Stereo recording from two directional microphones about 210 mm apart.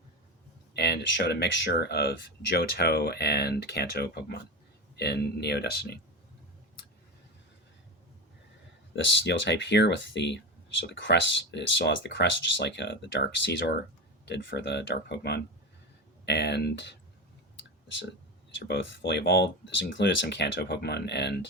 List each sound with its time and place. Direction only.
0.7 s speech: 55° left (ahead or behind)
9.2 s speech: 60° left (ahead or behind)
18.7 s speech: 60° left (ahead or behind)